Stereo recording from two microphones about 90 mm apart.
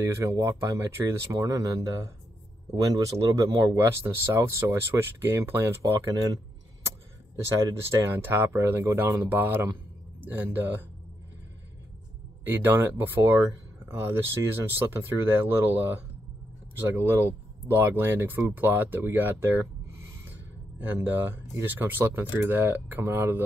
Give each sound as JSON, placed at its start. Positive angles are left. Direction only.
{"t": 0.0, "sound": "speech", "side_deg": -35}
{"t": 3.7, "sound": "speech", "side_deg": -30}
{"t": 6.0, "sound": "a sound", "side_deg": -45}
{"t": 7.8, "sound": "speech", "side_deg": -30}
{"t": 12.4, "sound": "speech", "side_deg": -25}